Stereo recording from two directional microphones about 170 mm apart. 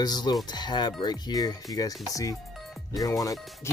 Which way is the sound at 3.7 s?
15° left (ahead or behind).